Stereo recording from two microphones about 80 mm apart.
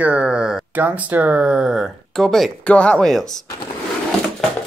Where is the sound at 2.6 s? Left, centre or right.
Centre.